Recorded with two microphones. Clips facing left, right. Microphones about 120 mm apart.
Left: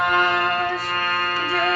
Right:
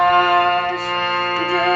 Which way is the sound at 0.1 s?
45° right (ahead or behind).